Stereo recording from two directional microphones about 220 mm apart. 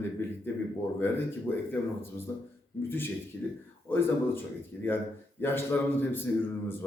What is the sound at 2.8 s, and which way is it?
A man's voice, 10° left (ahead or behind).